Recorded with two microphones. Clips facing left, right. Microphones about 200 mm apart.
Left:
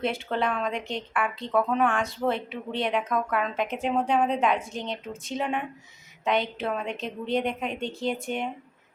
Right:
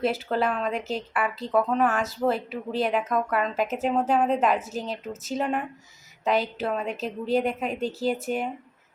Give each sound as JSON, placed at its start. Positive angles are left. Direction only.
{"t": 0.0, "sound": "speech", "side_deg": -5}